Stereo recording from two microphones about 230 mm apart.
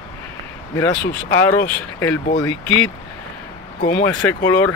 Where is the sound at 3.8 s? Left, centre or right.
Left.